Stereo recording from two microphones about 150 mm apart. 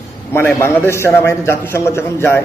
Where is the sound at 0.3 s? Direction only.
15° left (ahead or behind).